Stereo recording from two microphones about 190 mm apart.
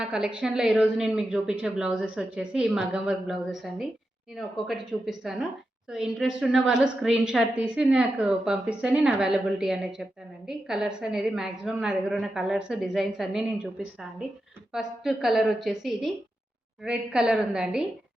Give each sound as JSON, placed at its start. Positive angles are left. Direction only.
{"t": 0.0, "sound": "a woman's voice", "side_deg": -5}